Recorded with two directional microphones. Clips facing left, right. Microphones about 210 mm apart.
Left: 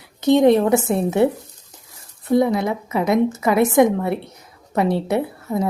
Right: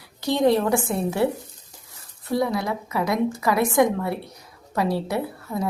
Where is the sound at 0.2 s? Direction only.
20° left (ahead or behind).